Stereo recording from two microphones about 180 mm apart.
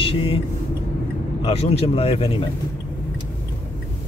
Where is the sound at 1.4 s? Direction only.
35° left (ahead or behind).